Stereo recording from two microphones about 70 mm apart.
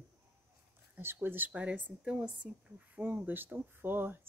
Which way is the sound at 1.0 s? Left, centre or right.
Right.